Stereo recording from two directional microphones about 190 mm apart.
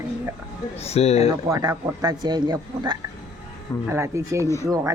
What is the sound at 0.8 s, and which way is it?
Speech, 35° left (ahead or behind).